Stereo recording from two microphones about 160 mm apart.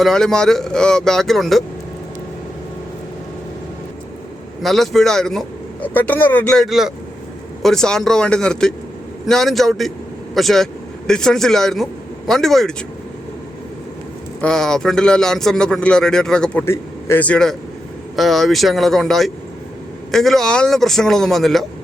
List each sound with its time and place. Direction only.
0.0 s a man's voice: 5° left (ahead or behind)
4.6 s a man's voice: centre (ahead or behind)
14.4 s a man's voice: 5° left (ahead or behind)